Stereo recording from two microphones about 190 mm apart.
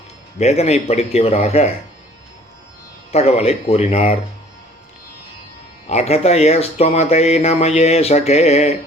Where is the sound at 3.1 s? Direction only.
35° left (ahead or behind).